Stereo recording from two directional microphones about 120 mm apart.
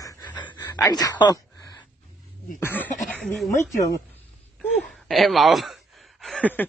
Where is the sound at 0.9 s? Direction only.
35° left (ahead or behind).